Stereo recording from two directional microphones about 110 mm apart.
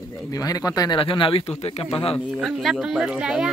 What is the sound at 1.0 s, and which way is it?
Speech, 55° left (ahead or behind).